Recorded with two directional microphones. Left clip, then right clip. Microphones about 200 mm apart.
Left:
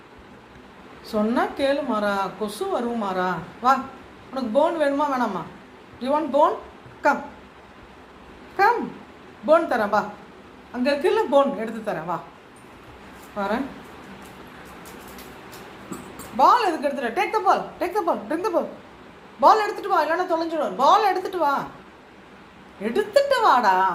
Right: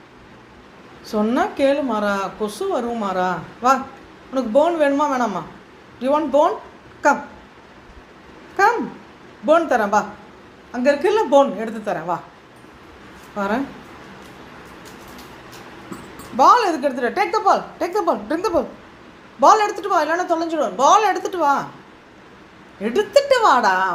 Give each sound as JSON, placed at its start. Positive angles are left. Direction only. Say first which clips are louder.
{"t": 1.0, "sound": "a woman's voice", "louder": "right 3 dB", "side_deg": -45}
{"t": 9.5, "sound": "a woman's voice", "louder": "right 3 dB", "side_deg": -45}
{"t": 13.3, "sound": "a woman's voice", "louder": "right 3 dB", "side_deg": -45}
{"t": 16.4, "sound": "a woman's voice", "louder": "right 4 dB", "side_deg": -45}
{"t": 22.8, "sound": "a woman's voice", "louder": "right 3 dB", "side_deg": -45}